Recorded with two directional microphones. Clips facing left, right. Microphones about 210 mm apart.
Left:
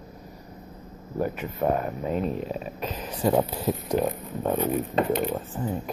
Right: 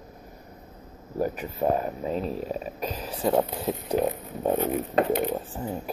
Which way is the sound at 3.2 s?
Centre (ahead or behind).